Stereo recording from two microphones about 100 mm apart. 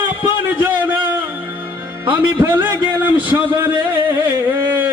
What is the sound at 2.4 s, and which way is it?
Speech, 20° right (ahead or behind).